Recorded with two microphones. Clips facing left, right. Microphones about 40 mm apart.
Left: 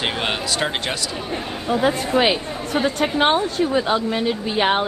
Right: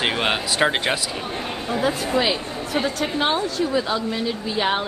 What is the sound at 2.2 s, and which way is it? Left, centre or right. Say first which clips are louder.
A woman's voice: left 3 dB; left.